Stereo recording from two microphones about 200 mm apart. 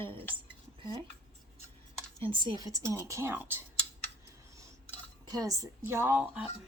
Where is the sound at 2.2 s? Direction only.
25° right (ahead or behind).